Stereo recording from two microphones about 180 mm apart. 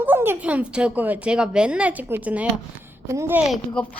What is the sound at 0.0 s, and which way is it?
Speech, 10° right (ahead or behind).